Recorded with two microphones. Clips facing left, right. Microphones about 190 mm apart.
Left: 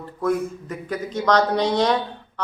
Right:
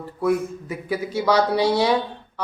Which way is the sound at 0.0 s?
10° right (ahead or behind).